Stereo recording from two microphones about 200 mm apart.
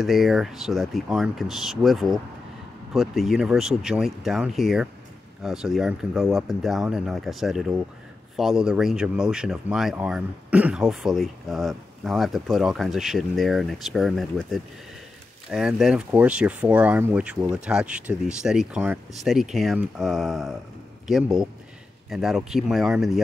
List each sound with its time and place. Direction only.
0.0 s speech: centre (ahead or behind)